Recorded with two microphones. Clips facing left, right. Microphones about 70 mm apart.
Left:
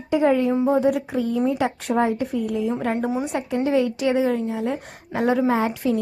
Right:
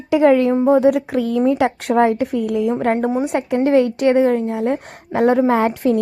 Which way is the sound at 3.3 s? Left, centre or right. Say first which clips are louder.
Right 7 dB; right.